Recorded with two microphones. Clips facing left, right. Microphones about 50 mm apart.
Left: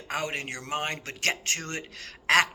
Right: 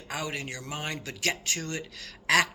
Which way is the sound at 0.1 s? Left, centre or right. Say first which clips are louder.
Left 3 dB; left.